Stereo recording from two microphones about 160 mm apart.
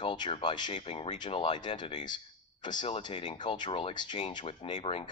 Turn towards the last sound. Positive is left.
turn(degrees=35)  # may be behind; listen again after turning